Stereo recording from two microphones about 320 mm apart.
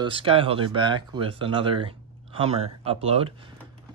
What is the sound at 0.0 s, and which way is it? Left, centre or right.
Speech, centre.